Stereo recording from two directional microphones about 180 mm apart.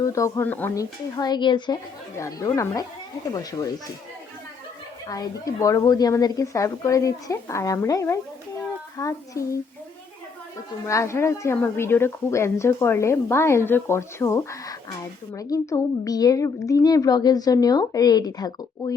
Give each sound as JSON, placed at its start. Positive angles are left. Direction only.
{"t": 0.0, "sound": "a woman's voice", "side_deg": 15}
{"t": 5.0, "sound": "a woman's voice", "side_deg": 20}
{"t": 10.8, "sound": "a woman's voice", "side_deg": 15}